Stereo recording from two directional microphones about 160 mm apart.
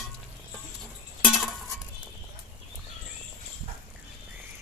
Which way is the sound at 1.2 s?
Centre (ahead or behind).